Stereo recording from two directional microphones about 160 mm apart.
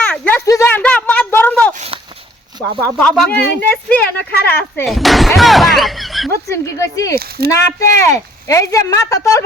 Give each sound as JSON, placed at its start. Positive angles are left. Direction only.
{"t": 0.0, "sound": "a sound", "side_deg": 10}
{"t": 0.8, "sound": "a sound", "side_deg": 10}
{"t": 3.0, "sound": "speech", "side_deg": 5}
{"t": 4.9, "sound": "speech", "side_deg": 0}
{"t": 6.5, "sound": "speech", "side_deg": 20}
{"t": 7.2, "sound": "speech", "side_deg": -75}
{"t": 7.8, "sound": "speech", "side_deg": 20}